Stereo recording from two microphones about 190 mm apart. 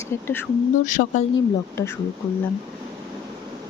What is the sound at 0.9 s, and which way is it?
Speech, 45° left (ahead or behind).